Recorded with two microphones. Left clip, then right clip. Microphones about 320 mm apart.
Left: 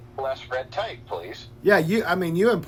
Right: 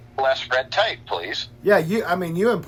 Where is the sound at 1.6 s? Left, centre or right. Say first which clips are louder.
Right 1 dB; centre.